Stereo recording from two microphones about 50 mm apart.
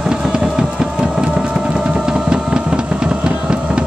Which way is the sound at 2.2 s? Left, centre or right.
Centre.